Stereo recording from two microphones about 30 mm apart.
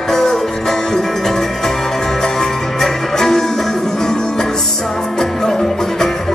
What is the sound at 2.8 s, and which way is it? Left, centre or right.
Music, centre.